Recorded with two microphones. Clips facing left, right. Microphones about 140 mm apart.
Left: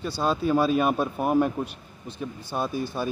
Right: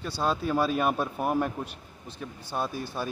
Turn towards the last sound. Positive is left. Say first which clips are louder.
# left 4 dB
turn(degrees=-5)  # may be behind; listen again after turning